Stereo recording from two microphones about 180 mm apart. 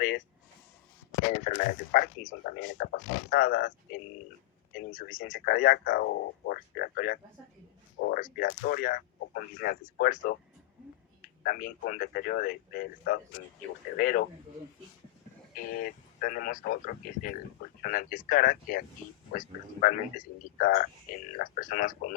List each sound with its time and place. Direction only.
1.3 s a man's voice: 45° left (ahead or behind)
11.4 s a man's voice: 50° left (ahead or behind)
15.8 s a man's voice: 50° left (ahead or behind)